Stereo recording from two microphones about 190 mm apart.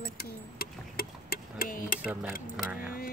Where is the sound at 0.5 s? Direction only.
50° left (ahead or behind).